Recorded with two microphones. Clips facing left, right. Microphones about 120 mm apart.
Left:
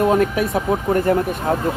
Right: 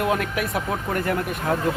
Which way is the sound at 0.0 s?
30° left (ahead or behind).